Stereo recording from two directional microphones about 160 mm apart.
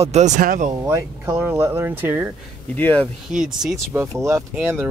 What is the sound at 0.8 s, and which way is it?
Speech, 15° right (ahead or behind).